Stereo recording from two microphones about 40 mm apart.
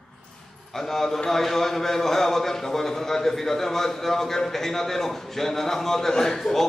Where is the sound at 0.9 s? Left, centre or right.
Centre.